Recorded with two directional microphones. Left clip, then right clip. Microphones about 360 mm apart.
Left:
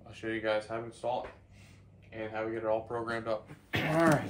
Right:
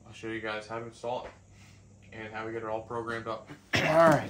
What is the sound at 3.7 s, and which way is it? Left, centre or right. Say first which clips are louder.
Speech: right 7 dB; centre.